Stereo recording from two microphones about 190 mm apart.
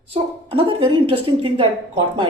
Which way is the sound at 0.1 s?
25° right (ahead or behind).